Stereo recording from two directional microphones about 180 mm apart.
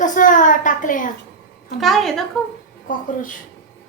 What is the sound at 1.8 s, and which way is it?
Speech, centre (ahead or behind).